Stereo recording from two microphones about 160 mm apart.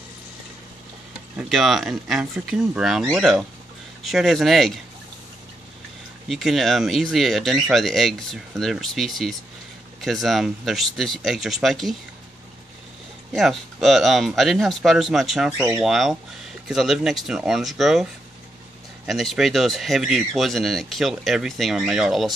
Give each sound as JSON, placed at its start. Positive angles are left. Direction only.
{"t": 1.4, "sound": "speech", "side_deg": 0}
{"t": 6.2, "sound": "speech", "side_deg": 0}
{"t": 13.3, "sound": "speech", "side_deg": 0}
{"t": 15.5, "sound": "speech", "side_deg": -20}
{"t": 15.8, "sound": "speech", "side_deg": 0}
{"t": 19.0, "sound": "speech", "side_deg": 0}